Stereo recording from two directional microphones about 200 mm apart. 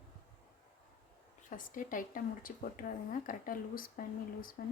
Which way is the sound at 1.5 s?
40° left (ahead or behind).